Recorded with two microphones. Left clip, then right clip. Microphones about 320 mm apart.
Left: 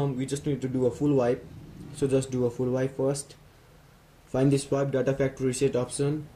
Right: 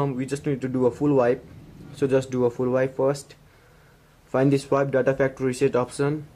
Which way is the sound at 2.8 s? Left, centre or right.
Right.